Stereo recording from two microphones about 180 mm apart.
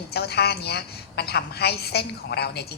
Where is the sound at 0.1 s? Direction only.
65° left (ahead or behind).